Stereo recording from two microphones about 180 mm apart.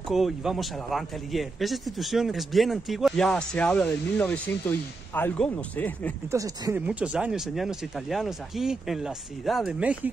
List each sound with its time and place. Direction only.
0.1 s a man's voice: centre (ahead or behind)
6.3 s speech: 20° right (ahead or behind)
6.9 s a man's voice: 5° right (ahead or behind)